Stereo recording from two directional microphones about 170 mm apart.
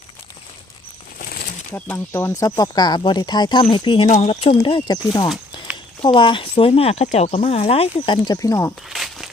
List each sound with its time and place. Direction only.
1.7 s speech: 15° left (ahead or behind)
6.0 s speech: 30° left (ahead or behind)
8.9 s a sound: centre (ahead or behind)